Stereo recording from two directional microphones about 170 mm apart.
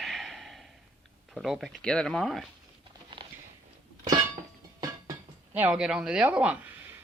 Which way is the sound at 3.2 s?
30° right (ahead or behind).